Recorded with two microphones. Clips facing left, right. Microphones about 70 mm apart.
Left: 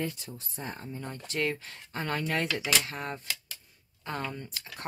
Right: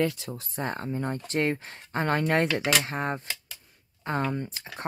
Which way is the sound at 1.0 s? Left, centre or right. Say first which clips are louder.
Right 4 dB; right.